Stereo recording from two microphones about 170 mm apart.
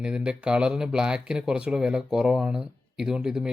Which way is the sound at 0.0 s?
5° right (ahead or behind).